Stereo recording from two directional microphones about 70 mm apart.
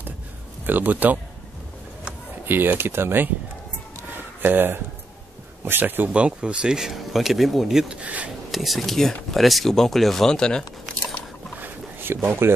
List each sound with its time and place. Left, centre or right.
0.7 s speech: right
2.4 s speech: right
4.1 s a sound: right
5.7 s speech: right
6.0 s speech: centre
7.9 s speech: centre
8.5 s speech: centre
11.6 s a sound: right